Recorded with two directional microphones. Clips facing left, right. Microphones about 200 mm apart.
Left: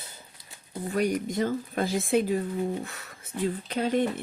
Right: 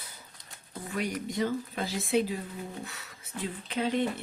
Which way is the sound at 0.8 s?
40° left (ahead or behind).